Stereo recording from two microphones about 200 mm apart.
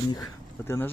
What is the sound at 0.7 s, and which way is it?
Speech, 10° left (ahead or behind).